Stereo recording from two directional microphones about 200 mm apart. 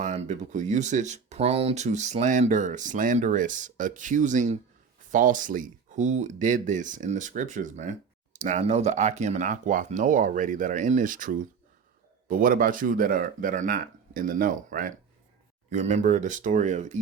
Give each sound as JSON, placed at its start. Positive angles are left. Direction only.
{"t": 0.0, "sound": "speech", "side_deg": -35}